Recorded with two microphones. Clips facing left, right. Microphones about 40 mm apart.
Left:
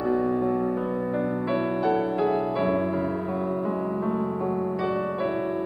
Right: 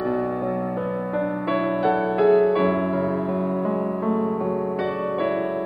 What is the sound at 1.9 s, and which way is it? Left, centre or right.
Music, right.